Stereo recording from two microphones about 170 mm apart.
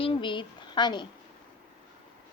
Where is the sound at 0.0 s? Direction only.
30° left (ahead or behind).